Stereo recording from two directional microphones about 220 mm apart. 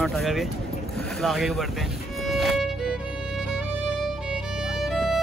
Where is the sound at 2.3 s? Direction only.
Centre (ahead or behind).